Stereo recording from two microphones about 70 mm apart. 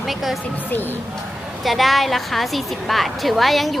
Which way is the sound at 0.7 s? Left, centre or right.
Left.